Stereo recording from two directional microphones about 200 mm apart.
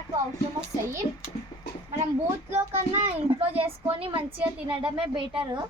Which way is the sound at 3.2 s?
30° right (ahead or behind).